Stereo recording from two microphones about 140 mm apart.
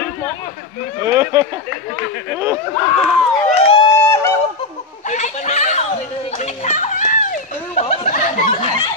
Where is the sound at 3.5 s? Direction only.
45° left (ahead or behind).